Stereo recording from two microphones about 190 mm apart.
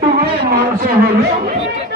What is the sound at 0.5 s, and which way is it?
Speech, 50° right (ahead or behind).